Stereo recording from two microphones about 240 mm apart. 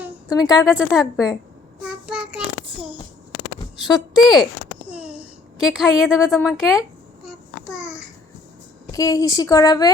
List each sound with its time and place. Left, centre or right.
0.3 s speech: centre
0.7 s speech: centre
1.8 s child singing: centre
3.8 s a child's voice: centre
7.3 s child singing: centre
8.9 s speech: centre